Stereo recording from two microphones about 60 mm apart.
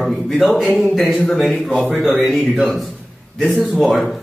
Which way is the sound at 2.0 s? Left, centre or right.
Centre.